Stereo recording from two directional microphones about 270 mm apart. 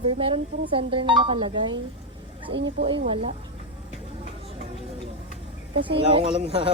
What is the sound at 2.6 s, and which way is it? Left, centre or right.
Speech, right.